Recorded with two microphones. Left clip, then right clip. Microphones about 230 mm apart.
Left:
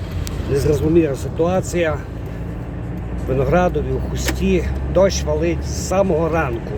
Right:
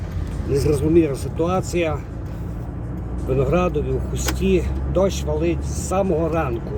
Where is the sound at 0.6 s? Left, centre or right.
Centre.